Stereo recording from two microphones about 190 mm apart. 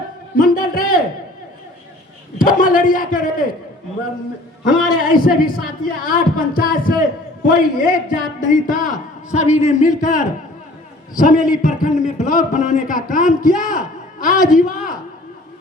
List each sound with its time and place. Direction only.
0.3 s a man's voice: 50° left (ahead or behind)
2.4 s a man's voice: 45° left (ahead or behind)
5.0 s a man's voice: 50° left (ahead or behind)